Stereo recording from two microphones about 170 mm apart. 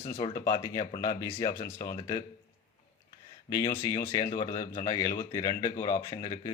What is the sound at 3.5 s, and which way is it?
Speech, 20° left (ahead or behind).